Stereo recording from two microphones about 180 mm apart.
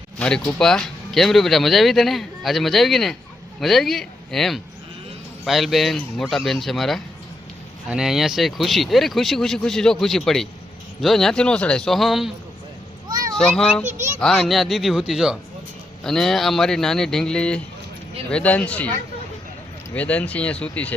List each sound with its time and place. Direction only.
0.2 s speech: 5° left (ahead or behind)
13.3 s speech: 5° left (ahead or behind)
13.8 s a child's voice: 40° right (ahead or behind)
14.2 s speech: centre (ahead or behind)